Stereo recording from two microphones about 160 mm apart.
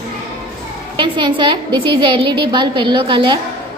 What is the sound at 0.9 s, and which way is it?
A woman's voice, 30° right (ahead or behind).